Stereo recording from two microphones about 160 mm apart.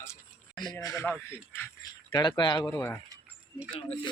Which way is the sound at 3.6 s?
35° left (ahead or behind).